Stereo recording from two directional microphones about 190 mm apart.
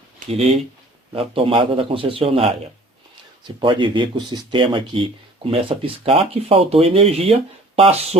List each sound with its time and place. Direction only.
0.2 s speech: 45° right (ahead or behind)
1.1 s speech: 30° right (ahead or behind)